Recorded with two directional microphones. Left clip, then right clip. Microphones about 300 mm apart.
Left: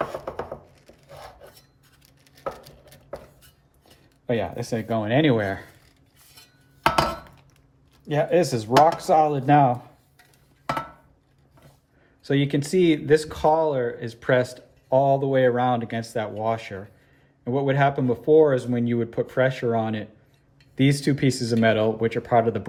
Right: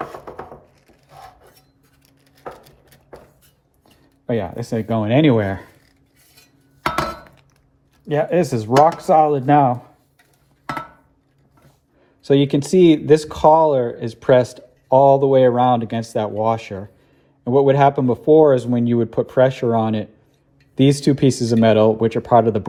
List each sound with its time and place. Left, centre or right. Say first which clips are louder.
2.3 s chopping: left 2 dB; centre
4.3 s speech: right 3 dB; centre
8.0 s speech: right 3 dB; centre
12.2 s speech: right 8 dB; centre